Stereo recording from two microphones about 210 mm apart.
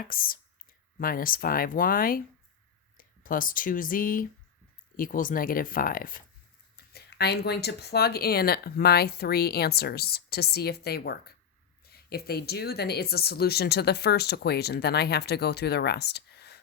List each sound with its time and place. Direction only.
0.1 s speech: 45° left (ahead or behind)